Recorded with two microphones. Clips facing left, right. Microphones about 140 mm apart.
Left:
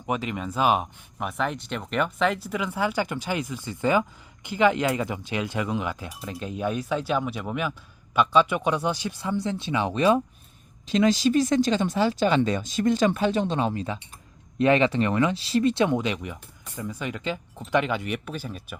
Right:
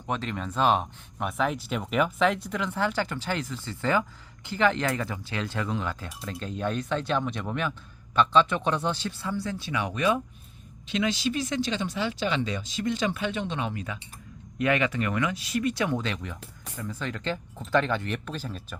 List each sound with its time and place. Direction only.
0.0 s speech: 10° left (ahead or behind)